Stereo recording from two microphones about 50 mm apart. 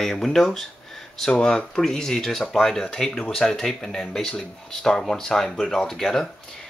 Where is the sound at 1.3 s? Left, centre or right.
Centre.